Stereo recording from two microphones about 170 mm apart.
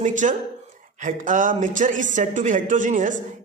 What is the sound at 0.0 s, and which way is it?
Speech, 45° right (ahead or behind).